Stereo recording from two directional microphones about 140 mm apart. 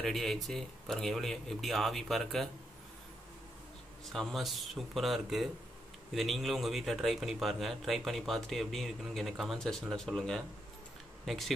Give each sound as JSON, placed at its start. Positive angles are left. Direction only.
{"t": 0.0, "sound": "speech", "side_deg": 0}
{"t": 4.1, "sound": "speech", "side_deg": 0}